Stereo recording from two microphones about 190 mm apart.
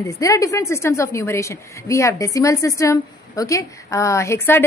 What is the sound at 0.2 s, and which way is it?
A woman's voice, 15° left (ahead or behind).